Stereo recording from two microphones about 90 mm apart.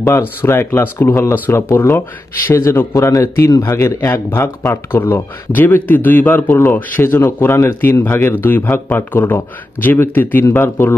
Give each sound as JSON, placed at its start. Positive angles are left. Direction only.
{"t": 0.4, "sound": "a man's voice", "side_deg": 25}